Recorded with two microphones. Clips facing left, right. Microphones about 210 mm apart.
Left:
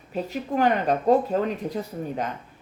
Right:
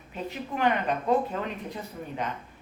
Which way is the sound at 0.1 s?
40° left (ahead or behind).